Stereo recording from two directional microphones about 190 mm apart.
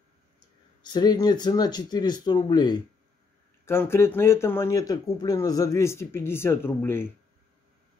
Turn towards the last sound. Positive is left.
turn(degrees=10)  # may be behind; listen again after turning